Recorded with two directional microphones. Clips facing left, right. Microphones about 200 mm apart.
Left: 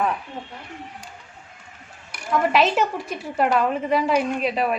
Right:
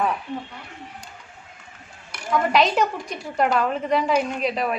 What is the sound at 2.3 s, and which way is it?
A woman's voice, 5° left (ahead or behind).